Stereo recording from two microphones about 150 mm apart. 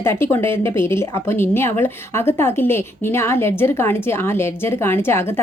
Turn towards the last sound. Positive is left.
turn(degrees=15)  # may be behind; listen again after turning